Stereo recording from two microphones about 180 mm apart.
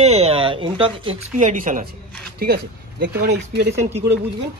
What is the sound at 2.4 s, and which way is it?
Speech, 60° right (ahead or behind).